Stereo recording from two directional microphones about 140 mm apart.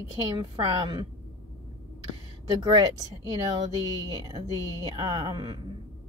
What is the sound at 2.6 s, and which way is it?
Speech, 25° right (ahead or behind).